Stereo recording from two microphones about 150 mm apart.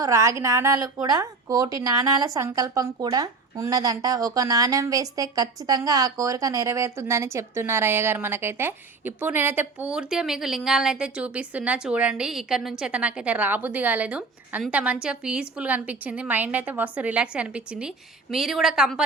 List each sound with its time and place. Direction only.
0.0 s a woman's voice: 20° right (ahead or behind); by 19.0 s 5° right (ahead or behind)